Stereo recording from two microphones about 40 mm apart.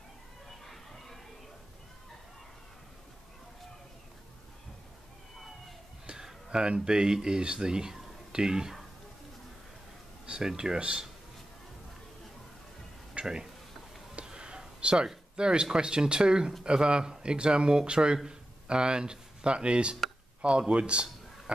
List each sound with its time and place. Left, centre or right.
0.5 s a sound: centre
6.1 s speech: centre
10.2 s speech: right
13.2 s speech: centre
14.1 s a sound: right
15.3 s speech: right